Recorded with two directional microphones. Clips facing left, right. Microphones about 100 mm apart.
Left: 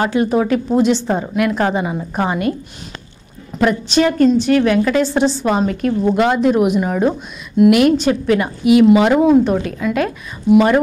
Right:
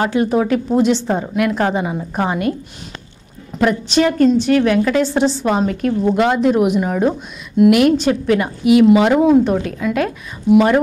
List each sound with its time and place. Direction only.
0.0 s a woman's voice: 15° left (ahead or behind)
3.5 s a woman's voice: 15° left (ahead or behind)